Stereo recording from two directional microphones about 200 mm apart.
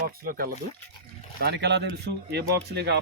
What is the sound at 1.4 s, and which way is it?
Speech, 55° right (ahead or behind).